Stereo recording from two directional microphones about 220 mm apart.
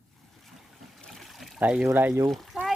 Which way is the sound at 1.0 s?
Centre (ahead or behind).